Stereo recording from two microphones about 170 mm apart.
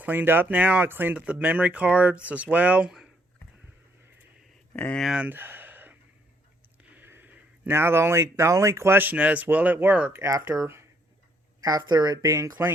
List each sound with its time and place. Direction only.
0.0 s speech: 10° right (ahead or behind)
4.7 s speech: 10° left (ahead or behind); by 12.7 s 15° right (ahead or behind)